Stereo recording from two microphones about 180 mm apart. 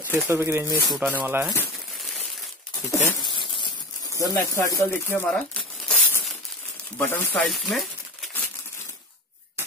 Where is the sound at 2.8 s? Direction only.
15° left (ahead or behind).